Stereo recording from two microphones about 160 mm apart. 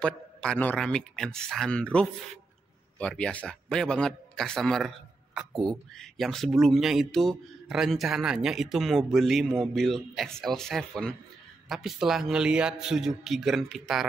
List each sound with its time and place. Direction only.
0.0 s a man's voice: 5° left (ahead or behind)